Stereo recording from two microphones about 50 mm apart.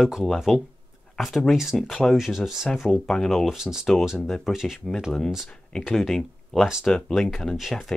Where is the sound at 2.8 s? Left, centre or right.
Centre.